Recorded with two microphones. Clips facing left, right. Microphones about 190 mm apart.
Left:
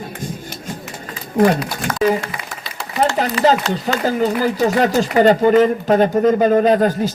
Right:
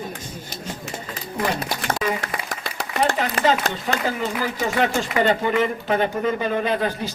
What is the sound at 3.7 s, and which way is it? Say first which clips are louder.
A man's voice: left 6 dB; 40° left (ahead or behind).